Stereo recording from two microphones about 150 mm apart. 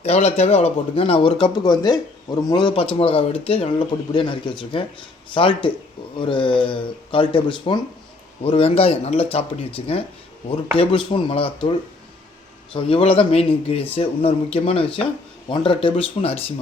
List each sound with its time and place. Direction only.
0.0 s a man's voice: 45° left (ahead or behind)
12.7 s a man's voice: 40° left (ahead or behind)